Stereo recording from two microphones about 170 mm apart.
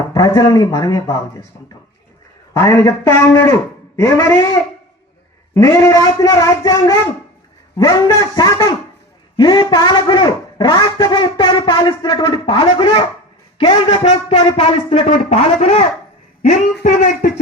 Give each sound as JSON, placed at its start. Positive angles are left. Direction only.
{"t": 0.1, "sound": "a man's voice", "side_deg": 20}
{"t": 2.5, "sound": "a man's voice", "side_deg": 20}
{"t": 5.5, "sound": "a man's voice", "side_deg": 15}